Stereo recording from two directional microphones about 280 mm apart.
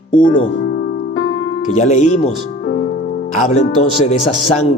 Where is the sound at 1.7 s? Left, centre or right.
Left.